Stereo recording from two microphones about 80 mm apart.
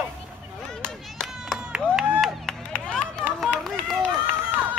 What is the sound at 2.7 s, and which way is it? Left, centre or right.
Run, centre.